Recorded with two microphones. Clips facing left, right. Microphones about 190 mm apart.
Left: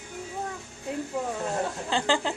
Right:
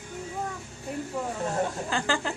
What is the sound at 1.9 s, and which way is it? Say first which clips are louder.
Speech: left 6 dB; 30° left (ahead or behind).